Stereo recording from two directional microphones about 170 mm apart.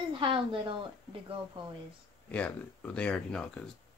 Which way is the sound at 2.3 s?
10° left (ahead or behind).